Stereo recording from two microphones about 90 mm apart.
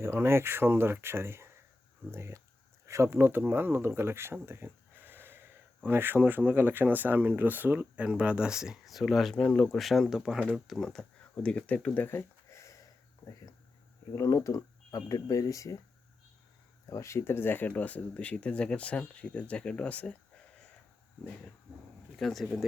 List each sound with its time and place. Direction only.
0.0 s speech: 25° right (ahead or behind); by 11.0 s 5° left (ahead or behind)
11.4 s speech: 15° left (ahead or behind); by 12.7 s 30° left (ahead or behind)
14.2 s speech: 35° left (ahead or behind)
16.9 s speech: 35° left (ahead or behind); by 20.1 s 15° left (ahead or behind)
22.2 s speech: centre (ahead or behind)